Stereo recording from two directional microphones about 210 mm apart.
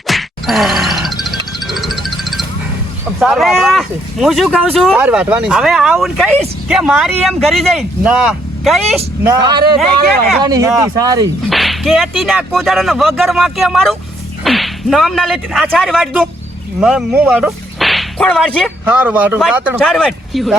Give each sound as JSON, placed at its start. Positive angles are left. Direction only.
{"t": 0.1, "sound": "music", "side_deg": 0}
{"t": 3.2, "sound": "speech", "side_deg": 0}
{"t": 10.3, "sound": "speech", "side_deg": -20}
{"t": 11.4, "sound": "speech", "side_deg": 0}
{"t": 16.8, "sound": "whip", "side_deg": -5}
{"t": 18.9, "sound": "speech", "side_deg": -5}